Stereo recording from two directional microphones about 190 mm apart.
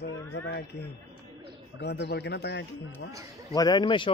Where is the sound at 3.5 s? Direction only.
20° left (ahead or behind).